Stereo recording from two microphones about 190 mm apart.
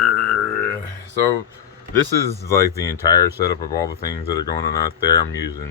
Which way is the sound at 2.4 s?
15° left (ahead or behind).